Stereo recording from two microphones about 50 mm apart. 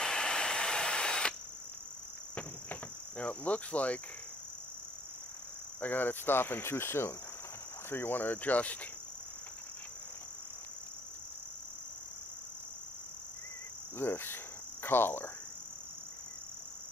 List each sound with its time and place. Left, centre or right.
0.0 s drill: centre
2.3 s cricket: left
5.8 s cricket: left
7.9 s speech: left
13.9 s cricket: left